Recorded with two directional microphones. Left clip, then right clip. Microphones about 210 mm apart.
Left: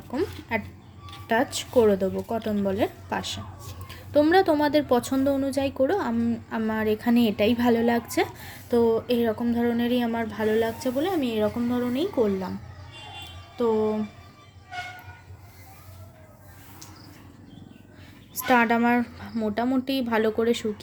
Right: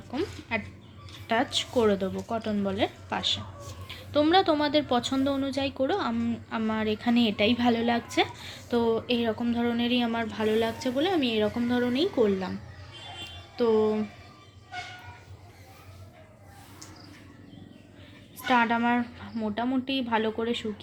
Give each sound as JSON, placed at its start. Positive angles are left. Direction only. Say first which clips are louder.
{"t": 0.1, "sound": "a woman's voice", "louder": "left 3 dB", "side_deg": 30}
{"t": 13.6, "sound": "a woman's voice", "louder": "even", "side_deg": 20}
{"t": 18.4, "sound": "a woman's voice", "louder": "left 3 dB", "side_deg": 35}